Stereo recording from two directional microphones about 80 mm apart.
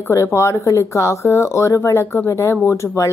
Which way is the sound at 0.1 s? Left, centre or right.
Left.